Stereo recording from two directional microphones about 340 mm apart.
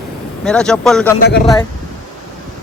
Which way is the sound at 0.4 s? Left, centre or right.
Centre.